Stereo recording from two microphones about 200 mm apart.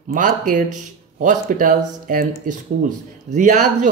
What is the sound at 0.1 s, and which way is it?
Speech, 40° right (ahead or behind).